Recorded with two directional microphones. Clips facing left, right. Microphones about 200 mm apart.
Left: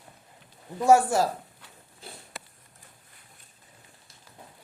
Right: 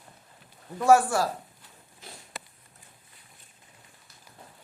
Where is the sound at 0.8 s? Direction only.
20° left (ahead or behind).